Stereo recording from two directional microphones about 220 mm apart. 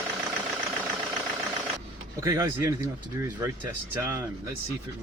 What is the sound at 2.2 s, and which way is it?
Speech, 15° right (ahead or behind).